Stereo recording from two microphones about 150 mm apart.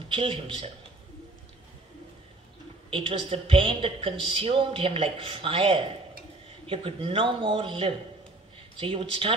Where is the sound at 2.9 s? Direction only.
35° right (ahead or behind).